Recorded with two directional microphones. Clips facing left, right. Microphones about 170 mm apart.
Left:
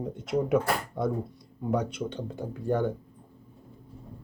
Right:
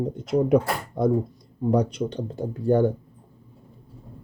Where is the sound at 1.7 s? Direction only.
35° right (ahead or behind).